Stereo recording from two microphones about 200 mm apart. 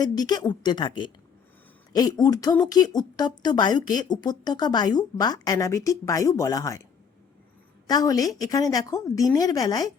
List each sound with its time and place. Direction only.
0.2 s a woman's voice: 20° left (ahead or behind)
7.9 s a woman's voice: 20° left (ahead or behind)